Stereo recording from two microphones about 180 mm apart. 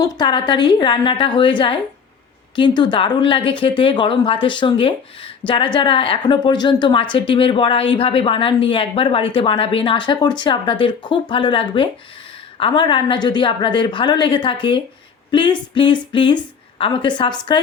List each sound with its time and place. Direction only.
0.0 s a woman's voice: 25° left (ahead or behind)